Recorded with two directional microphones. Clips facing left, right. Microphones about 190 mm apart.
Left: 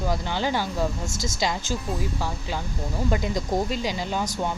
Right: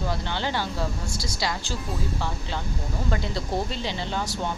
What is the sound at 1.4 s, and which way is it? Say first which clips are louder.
Speech: left 4 dB; 20° left (ahead or behind).